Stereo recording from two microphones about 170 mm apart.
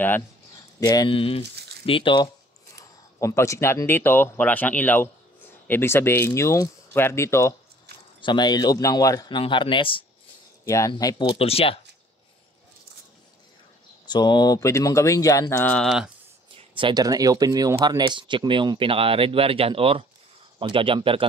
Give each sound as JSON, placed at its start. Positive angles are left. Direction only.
{"t": 0.7, "sound": "speech", "side_deg": 20}
{"t": 2.8, "sound": "speech", "side_deg": 15}
{"t": 8.2, "sound": "speech", "side_deg": 25}
{"t": 10.6, "sound": "speech", "side_deg": 20}
{"t": 11.3, "sound": "speech", "side_deg": 35}
{"t": 14.0, "sound": "speech", "side_deg": 25}
{"t": 16.5, "sound": "speech", "side_deg": -30}